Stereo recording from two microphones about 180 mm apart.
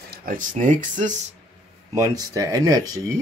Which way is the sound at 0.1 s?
50° right (ahead or behind).